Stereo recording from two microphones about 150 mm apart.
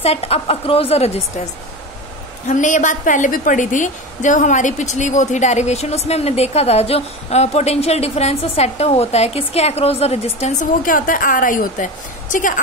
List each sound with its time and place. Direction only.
0.0 s a woman's voice: 45° left (ahead or behind)
2.4 s a woman's voice: 55° left (ahead or behind)
10.9 s a woman's voice: 65° left (ahead or behind)